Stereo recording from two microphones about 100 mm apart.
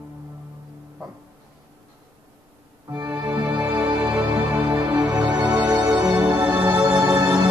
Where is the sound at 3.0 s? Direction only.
35° right (ahead or behind).